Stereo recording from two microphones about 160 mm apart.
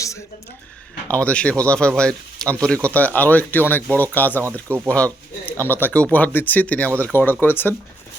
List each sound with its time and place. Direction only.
1.0 s a man's voice: 10° left (ahead or behind)